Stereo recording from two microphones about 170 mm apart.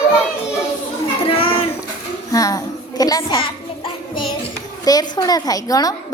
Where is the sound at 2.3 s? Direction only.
20° left (ahead or behind).